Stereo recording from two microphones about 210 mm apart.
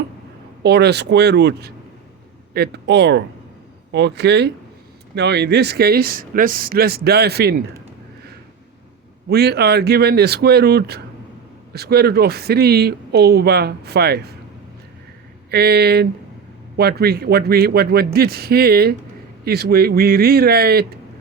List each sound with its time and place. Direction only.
0.6 s speech: 50° right (ahead or behind)
9.3 s speech: 50° right (ahead or behind)
15.4 s speech: 50° right (ahead or behind)